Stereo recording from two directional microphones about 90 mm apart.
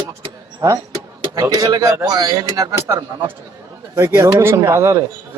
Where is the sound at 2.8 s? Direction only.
30° right (ahead or behind).